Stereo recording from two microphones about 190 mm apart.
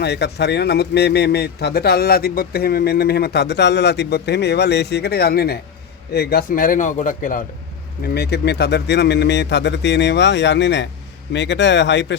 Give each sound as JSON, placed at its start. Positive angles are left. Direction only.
{"t": 0.0, "sound": "a man's voice", "side_deg": 60}
{"t": 8.0, "sound": "a man's voice", "side_deg": 60}